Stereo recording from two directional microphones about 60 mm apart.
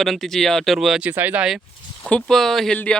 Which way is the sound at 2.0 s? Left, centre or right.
Centre.